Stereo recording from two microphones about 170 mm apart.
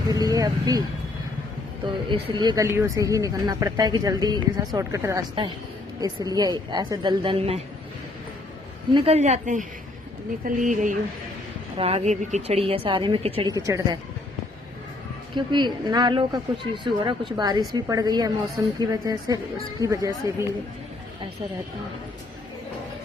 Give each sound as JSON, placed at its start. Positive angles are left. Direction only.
{"t": 0.1, "sound": "speech", "side_deg": -20}
{"t": 1.9, "sound": "speech", "side_deg": -25}
{"t": 8.9, "sound": "a woman's voice", "side_deg": -35}
{"t": 11.8, "sound": "a woman's voice", "side_deg": -35}
{"t": 13.5, "sound": "speech", "side_deg": -20}
{"t": 15.4, "sound": "speech", "side_deg": -25}